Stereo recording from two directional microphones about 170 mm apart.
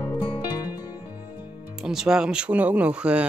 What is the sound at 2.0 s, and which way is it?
Speech, 5° right (ahead or behind).